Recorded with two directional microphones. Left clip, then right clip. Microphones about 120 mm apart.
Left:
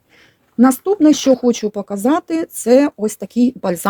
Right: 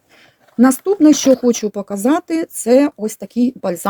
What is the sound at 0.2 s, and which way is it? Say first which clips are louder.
Speech: even; 10° left (ahead or behind).